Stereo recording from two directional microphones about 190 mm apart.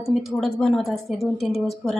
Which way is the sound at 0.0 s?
Centre (ahead or behind).